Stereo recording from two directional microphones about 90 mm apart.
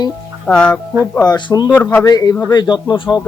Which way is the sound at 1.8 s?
20° left (ahead or behind).